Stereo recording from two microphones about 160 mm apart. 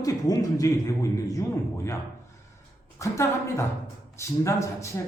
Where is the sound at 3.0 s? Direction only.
20° left (ahead or behind).